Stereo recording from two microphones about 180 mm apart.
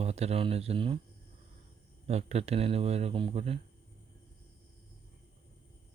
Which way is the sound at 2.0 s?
35° right (ahead or behind).